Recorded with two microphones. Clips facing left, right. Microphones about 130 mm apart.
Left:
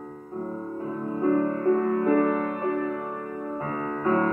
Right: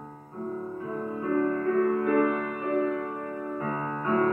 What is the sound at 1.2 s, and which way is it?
Music, 30° left (ahead or behind).